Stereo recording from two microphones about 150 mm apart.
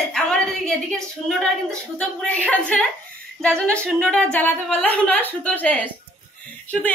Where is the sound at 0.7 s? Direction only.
5° left (ahead or behind).